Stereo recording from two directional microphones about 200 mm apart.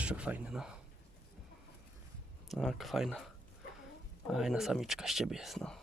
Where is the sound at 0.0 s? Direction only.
5° right (ahead or behind).